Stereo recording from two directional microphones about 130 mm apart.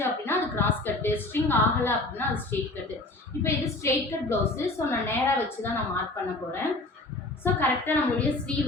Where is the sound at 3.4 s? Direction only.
20° left (ahead or behind).